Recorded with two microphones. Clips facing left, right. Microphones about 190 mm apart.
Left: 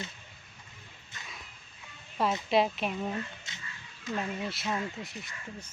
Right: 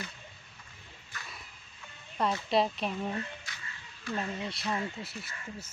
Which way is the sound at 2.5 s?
Centre (ahead or behind).